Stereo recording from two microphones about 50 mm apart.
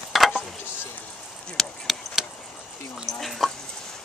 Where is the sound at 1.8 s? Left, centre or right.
Centre.